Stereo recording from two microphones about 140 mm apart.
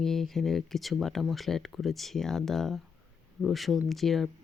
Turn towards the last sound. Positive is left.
turn(degrees=0)  # may be behind; listen again after turning